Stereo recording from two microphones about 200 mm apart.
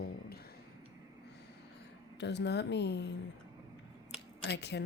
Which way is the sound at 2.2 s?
60° left (ahead or behind).